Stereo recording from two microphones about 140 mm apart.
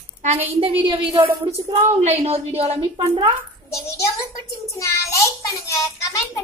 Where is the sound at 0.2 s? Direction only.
55° right (ahead or behind).